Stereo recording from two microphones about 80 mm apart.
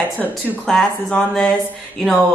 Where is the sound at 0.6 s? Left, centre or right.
Centre.